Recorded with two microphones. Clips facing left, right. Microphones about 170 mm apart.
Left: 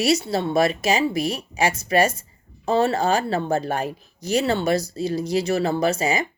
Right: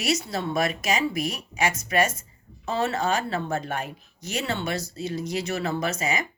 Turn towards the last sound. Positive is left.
turn(degrees=30)  # may be behind; listen again after turning